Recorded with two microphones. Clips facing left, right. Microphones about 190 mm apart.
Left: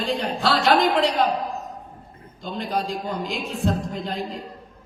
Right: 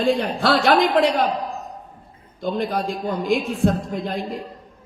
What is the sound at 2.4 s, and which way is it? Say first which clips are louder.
A man's voice: right 4 dB; 50° right (ahead or behind).